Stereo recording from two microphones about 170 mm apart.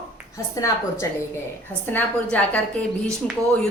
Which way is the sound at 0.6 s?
20° left (ahead or behind).